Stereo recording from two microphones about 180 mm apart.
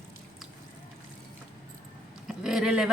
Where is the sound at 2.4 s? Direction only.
5° right (ahead or behind).